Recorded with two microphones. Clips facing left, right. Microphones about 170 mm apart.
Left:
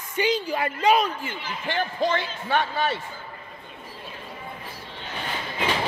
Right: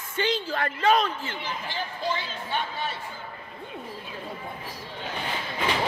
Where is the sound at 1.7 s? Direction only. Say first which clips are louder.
Left 8 dB; 65° left (ahead or behind).